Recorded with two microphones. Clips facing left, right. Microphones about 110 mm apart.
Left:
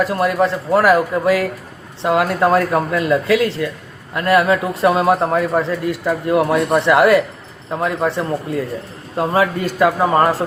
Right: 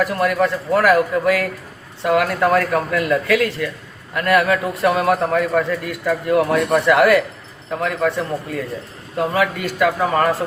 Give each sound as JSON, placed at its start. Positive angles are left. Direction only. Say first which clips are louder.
{"t": 0.0, "sound": "a man's voice", "louder": "left 1 dB", "side_deg": 25}